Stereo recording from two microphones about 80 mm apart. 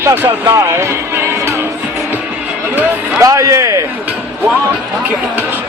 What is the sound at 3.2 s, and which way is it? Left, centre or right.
Speech, right.